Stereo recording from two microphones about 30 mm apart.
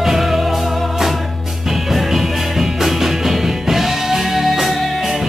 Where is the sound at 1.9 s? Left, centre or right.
Centre.